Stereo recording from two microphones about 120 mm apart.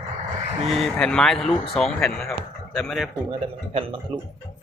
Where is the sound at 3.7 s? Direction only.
50° right (ahead or behind).